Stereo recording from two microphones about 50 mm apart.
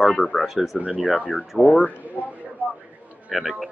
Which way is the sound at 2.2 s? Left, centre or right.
Left.